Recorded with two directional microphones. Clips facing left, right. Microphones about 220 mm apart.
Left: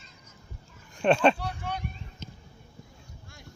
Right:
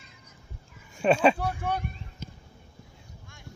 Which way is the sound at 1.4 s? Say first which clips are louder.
Right 5 dB; 50° right (ahead or behind).